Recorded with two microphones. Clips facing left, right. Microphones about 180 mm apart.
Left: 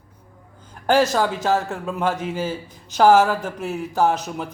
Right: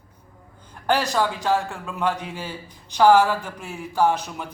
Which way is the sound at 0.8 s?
45° left (ahead or behind).